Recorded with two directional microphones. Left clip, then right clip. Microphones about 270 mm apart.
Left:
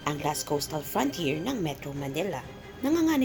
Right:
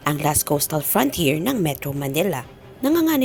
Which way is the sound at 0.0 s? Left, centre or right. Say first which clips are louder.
Right 8 dB; right.